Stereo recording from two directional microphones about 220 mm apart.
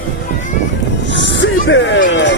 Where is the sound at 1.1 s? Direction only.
55° left (ahead or behind).